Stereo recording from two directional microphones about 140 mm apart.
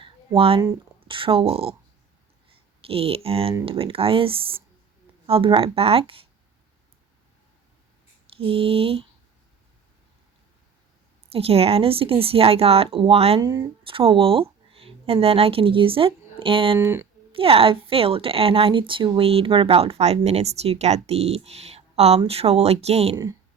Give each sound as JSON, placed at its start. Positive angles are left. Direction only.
{"t": 0.0, "sound": "a sound", "side_deg": -40}
{"t": 2.8, "sound": "speech", "side_deg": -40}
{"t": 8.3, "sound": "speech", "side_deg": -40}
{"t": 11.3, "sound": "speech", "side_deg": -45}
{"t": 13.4, "sound": "speech", "side_deg": -25}
{"t": 13.8, "sound": "speech", "side_deg": -40}
{"t": 16.7, "sound": "speech", "side_deg": -20}
{"t": 17.3, "sound": "speech", "side_deg": -40}